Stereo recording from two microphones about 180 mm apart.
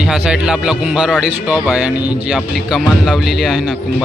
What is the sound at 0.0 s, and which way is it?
Speech, 5° right (ahead or behind).